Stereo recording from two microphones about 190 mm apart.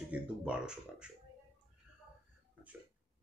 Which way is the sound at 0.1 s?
5° right (ahead or behind).